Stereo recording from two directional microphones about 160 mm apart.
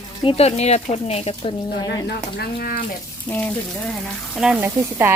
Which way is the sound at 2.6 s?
70° left (ahead or behind).